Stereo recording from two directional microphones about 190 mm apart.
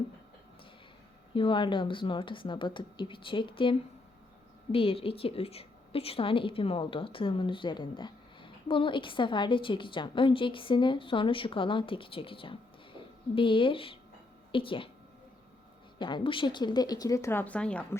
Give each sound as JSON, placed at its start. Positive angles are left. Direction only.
{"t": 1.3, "sound": "a woman's voice", "side_deg": 25}
{"t": 16.0, "sound": "a woman's voice", "side_deg": 25}